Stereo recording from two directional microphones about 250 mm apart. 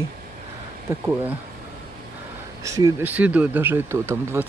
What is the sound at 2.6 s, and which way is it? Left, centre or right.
Speech, centre.